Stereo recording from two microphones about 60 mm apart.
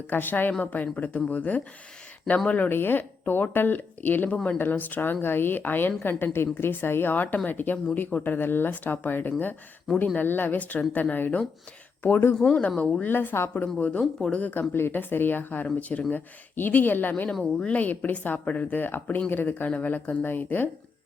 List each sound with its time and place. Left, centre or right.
0.1 s speech: left
12.4 s speech: centre
12.6 s speech: left
13.1 s speech: left
13.7 s speech: left
14.7 s speech: left